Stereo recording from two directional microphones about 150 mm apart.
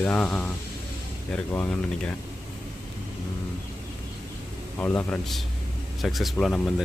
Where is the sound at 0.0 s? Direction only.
10° left (ahead or behind).